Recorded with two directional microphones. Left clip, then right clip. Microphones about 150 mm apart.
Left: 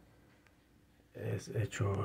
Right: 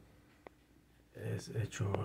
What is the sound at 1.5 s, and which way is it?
Speech, 15° left (ahead or behind).